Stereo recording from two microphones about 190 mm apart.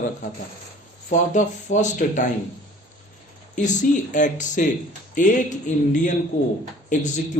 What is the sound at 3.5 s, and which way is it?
A man's voice, 40° left (ahead or behind).